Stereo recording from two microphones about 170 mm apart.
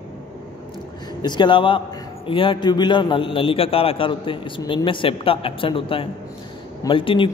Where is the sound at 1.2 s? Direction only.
25° left (ahead or behind).